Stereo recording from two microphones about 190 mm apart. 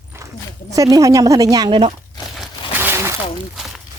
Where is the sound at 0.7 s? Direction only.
20° right (ahead or behind).